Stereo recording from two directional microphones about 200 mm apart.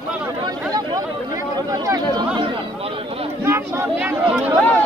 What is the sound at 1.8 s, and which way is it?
Speech, 20° right (ahead or behind).